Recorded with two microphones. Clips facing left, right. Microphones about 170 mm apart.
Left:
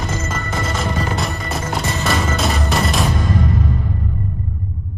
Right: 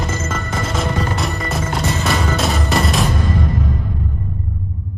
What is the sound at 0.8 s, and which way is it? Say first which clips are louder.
Music: right 2 dB; centre (ahead or behind).